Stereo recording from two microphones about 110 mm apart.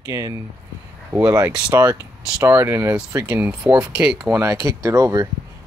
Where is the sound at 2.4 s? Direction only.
25° right (ahead or behind).